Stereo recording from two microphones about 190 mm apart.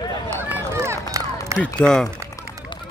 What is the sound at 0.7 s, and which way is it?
Run, 15° right (ahead or behind).